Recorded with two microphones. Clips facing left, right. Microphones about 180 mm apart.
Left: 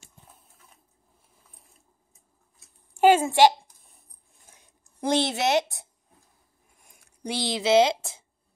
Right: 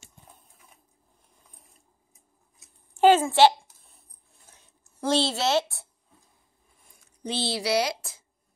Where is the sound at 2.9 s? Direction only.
10° left (ahead or behind).